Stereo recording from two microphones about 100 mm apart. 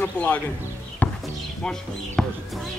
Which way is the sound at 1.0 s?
15° left (ahead or behind).